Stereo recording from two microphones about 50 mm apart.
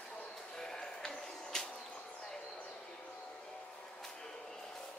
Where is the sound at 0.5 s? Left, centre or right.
Centre.